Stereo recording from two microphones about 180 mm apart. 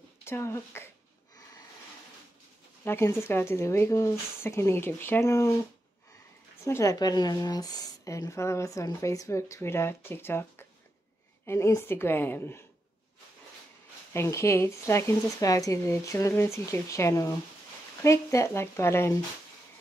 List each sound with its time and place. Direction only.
0.2 s speech: 15° left (ahead or behind)
2.8 s speech: 15° left (ahead or behind)
6.6 s speech: 15° left (ahead or behind)
14.1 s speech: 15° left (ahead or behind)